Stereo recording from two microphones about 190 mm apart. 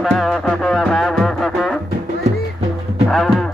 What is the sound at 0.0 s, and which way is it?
Music, centre (ahead or behind).